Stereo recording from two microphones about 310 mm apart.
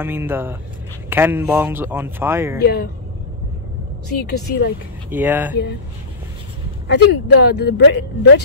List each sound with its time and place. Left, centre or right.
0.0 s speech: centre
2.6 s speech: left
4.2 s speech: left
5.1 s speech: centre
6.9 s speech: left